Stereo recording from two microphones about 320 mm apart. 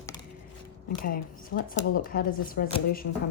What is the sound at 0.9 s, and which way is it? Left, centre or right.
Speech, left.